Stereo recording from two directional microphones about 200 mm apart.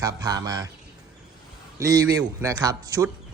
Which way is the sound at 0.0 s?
20° right (ahead or behind).